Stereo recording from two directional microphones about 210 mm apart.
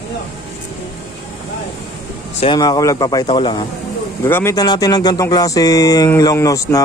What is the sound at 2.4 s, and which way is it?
A man's voice, 20° left (ahead or behind).